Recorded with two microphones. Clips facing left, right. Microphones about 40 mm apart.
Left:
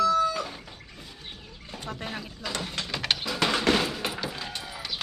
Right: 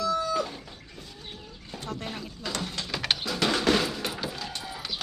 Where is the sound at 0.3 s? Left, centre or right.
Centre.